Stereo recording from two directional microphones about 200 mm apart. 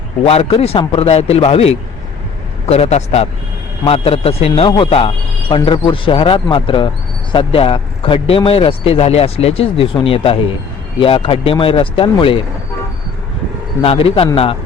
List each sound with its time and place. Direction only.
0.3 s a man's voice: 30° left (ahead or behind)
13.8 s speech: 30° left (ahead or behind)